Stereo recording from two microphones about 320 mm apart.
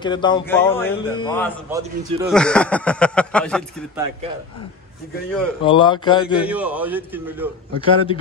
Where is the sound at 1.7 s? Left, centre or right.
Centre.